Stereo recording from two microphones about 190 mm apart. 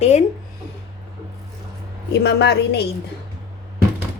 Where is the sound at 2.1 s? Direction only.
65° left (ahead or behind).